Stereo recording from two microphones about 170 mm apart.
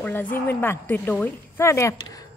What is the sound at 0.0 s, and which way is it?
A woman's voice, 10° left (ahead or behind).